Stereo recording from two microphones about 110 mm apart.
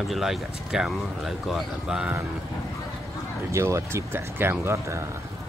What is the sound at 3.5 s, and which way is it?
Speech, 25° right (ahead or behind).